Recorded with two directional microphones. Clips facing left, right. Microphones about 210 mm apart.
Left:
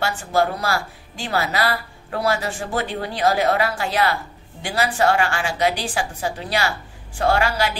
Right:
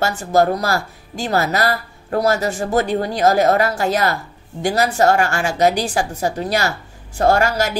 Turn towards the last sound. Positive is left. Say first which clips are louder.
# right 4 dB
turn(degrees=-45)  # may be behind; listen again after turning